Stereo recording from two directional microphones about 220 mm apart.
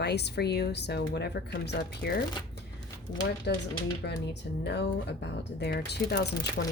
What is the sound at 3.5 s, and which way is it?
Speech, 50° left (ahead or behind).